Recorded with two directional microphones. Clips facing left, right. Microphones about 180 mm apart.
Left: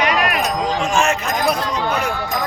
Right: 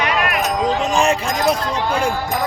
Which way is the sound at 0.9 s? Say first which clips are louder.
Right 1 dB; 35° right (ahead or behind).